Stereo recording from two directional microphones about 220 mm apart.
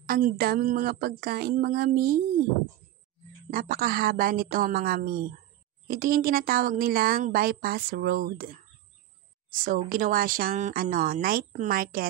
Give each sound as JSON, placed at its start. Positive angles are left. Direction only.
{"t": 0.1, "sound": "speech", "side_deg": -40}
{"t": 3.4, "sound": "speech", "side_deg": -40}
{"t": 9.7, "sound": "speech", "side_deg": -40}